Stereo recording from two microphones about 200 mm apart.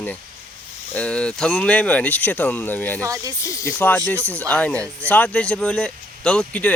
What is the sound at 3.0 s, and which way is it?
Speech, 15° right (ahead or behind).